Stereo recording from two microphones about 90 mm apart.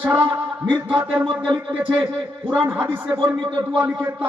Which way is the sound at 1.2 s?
60° right (ahead or behind).